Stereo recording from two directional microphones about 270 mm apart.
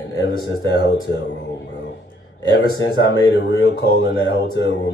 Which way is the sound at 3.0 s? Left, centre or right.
Left.